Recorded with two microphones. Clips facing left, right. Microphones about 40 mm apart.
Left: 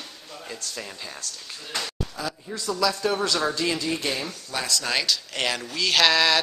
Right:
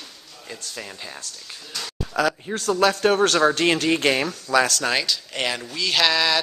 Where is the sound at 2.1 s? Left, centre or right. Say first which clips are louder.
Right 10 dB; right.